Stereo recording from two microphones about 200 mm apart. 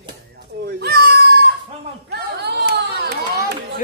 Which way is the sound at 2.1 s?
55° right (ahead or behind).